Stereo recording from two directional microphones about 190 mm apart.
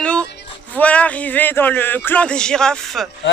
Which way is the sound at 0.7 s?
5° left (ahead or behind).